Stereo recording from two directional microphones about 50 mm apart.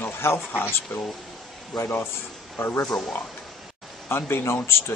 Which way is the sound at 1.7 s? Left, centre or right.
Left.